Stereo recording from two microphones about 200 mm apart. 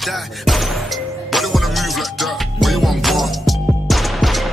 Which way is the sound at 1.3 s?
Centre (ahead or behind).